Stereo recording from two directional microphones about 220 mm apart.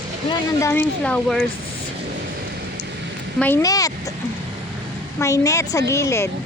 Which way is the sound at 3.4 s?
10° left (ahead or behind).